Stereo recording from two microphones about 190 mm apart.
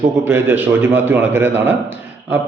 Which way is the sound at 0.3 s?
10° right (ahead or behind).